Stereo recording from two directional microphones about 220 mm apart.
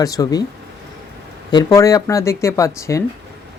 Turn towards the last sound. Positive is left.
turn(degrees=15)  # may be behind; listen again after turning